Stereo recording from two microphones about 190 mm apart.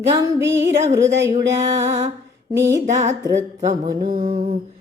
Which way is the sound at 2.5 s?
15° right (ahead or behind).